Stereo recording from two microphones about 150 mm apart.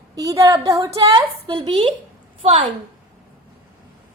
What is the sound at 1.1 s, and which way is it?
A woman's voice, 30° right (ahead or behind).